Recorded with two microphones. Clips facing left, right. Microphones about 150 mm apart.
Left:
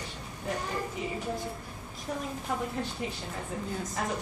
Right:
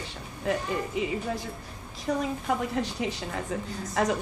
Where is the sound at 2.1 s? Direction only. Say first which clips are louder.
Right 6 dB; 80° right.